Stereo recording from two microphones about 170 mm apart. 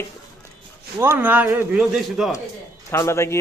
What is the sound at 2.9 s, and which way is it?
Speech, 15° left (ahead or behind).